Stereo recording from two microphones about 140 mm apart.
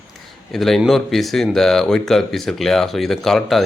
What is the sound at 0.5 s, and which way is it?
Speech, centre (ahead or behind).